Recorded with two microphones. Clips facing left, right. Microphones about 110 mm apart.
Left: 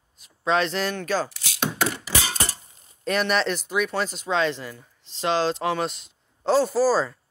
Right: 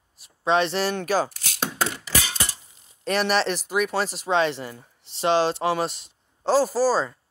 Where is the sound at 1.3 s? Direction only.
50° right (ahead or behind).